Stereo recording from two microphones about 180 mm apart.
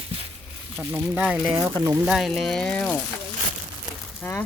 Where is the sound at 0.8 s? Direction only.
5° right (ahead or behind).